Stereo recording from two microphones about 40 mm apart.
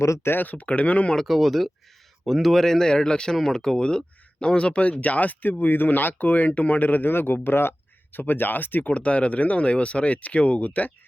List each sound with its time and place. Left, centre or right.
0.4 s speech: left
1.3 s speech: centre; by 7.3 s left
7.4 s a sound: left
8.2 s speech: left
8.9 s speech: left